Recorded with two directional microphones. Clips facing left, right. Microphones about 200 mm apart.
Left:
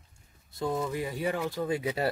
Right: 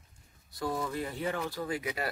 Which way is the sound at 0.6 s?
25° left (ahead or behind).